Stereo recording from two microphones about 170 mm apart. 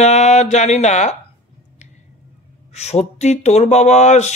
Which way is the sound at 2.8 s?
40° left (ahead or behind).